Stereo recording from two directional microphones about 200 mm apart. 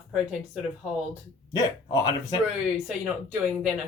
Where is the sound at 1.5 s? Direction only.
20° left (ahead or behind).